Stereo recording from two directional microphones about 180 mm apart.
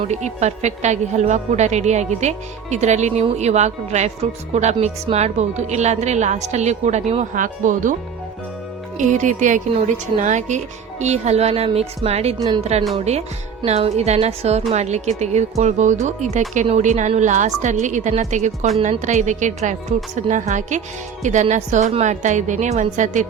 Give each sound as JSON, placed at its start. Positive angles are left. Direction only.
{"t": 0.1, "sound": "a woman's voice", "side_deg": -40}
{"t": 9.0, "sound": "a woman's voice", "side_deg": -45}
{"t": 12.4, "sound": "a woman's voice", "side_deg": -25}
{"t": 13.0, "sound": "a woman's voice", "side_deg": -35}